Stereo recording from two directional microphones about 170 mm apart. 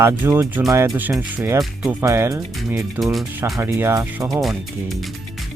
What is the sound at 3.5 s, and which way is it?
Speech, 15° right (ahead or behind).